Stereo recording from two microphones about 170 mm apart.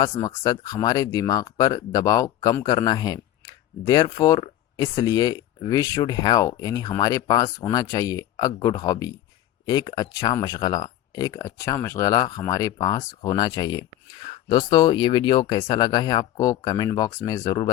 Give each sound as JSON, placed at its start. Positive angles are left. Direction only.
{"t": 0.0, "sound": "speech", "side_deg": 25}